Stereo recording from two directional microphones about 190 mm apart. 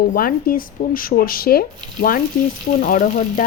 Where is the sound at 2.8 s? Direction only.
45° left (ahead or behind).